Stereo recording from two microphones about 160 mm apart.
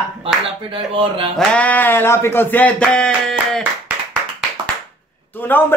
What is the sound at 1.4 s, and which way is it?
Speech, 10° left (ahead or behind).